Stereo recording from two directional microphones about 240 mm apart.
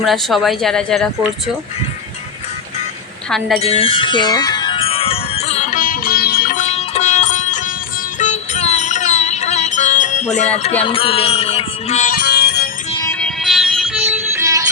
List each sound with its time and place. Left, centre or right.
0.0 s speech: centre
3.2 s speech: centre
3.6 s bell: left
8.2 s music: left
12.9 s music: centre
13.1 s music: centre
14.0 s music: centre